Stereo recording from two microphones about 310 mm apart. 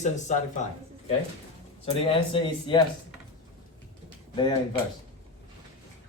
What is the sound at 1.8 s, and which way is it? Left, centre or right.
Speech, centre.